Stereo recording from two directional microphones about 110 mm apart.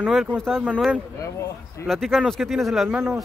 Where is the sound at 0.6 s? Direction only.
10° right (ahead or behind).